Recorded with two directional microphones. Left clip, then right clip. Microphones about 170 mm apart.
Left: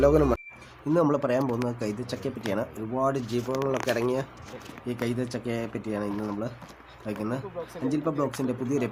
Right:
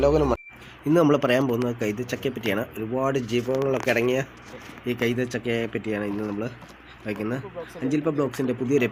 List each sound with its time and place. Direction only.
0.0 s speech: 35° left (ahead or behind)
0.9 s speech: 10° right (ahead or behind)
1.5 s speech: centre (ahead or behind)